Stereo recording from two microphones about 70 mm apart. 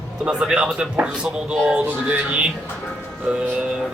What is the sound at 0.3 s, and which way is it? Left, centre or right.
Speech, centre.